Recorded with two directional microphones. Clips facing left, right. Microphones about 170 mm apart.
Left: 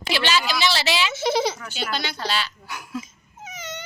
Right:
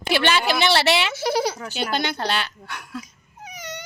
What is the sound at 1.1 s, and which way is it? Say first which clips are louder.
Speech: even; 10° right (ahead or behind).